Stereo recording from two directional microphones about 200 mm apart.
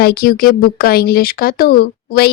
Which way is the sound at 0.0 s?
50° left (ahead or behind).